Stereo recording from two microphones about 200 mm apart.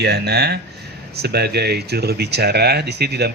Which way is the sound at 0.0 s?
55° right (ahead or behind).